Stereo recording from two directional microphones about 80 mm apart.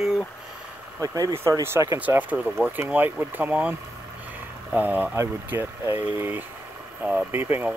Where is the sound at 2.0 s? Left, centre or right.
Right.